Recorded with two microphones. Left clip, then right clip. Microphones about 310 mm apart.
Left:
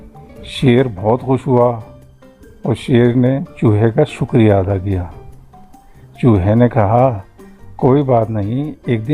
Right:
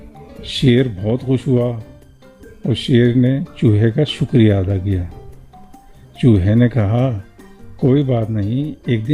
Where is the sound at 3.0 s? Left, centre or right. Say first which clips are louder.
Left 4 dB; left.